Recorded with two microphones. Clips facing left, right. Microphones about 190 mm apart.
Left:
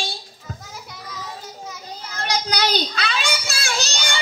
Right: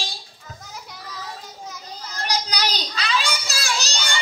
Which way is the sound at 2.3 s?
50° left (ahead or behind).